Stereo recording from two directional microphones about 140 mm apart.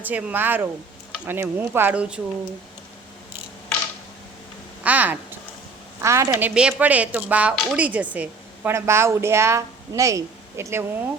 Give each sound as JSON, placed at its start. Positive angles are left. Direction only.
{"t": 0.0, "sound": "a woman's voice", "side_deg": -10}
{"t": 4.8, "sound": "a sound", "side_deg": -10}
{"t": 6.0, "sound": "a woman's voice", "side_deg": -20}